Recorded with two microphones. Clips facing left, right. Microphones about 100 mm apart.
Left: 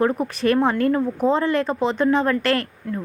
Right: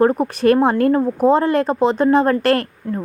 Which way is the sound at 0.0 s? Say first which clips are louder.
Right 5 dB; 40° right (ahead or behind).